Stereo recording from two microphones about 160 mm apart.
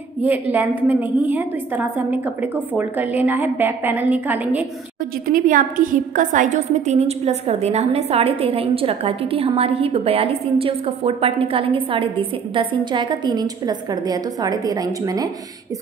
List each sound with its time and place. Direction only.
0.2 s a woman's voice: 10° right (ahead or behind)
5.2 s a woman's voice: 60° right (ahead or behind); by 15.2 s 25° right (ahead or behind)